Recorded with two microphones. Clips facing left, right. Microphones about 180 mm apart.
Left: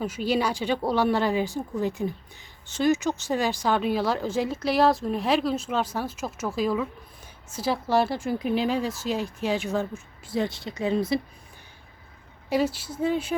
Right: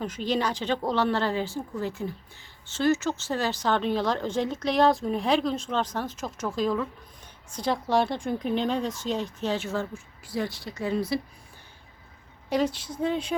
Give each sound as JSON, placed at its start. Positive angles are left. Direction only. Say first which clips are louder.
{"t": 0.0, "sound": "speech", "louder": "left 2 dB", "side_deg": 10}
{"t": 12.5, "sound": "speech", "louder": "left 1 dB", "side_deg": 5}